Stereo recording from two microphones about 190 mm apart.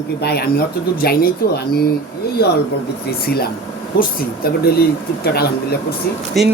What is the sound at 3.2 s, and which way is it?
Speech, 55° left (ahead or behind).